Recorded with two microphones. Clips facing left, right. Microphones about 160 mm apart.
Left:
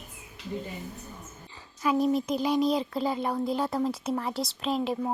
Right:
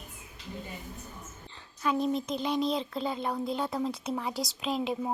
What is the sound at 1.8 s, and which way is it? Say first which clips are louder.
Speech: left 4 dB; 5° left (ahead or behind).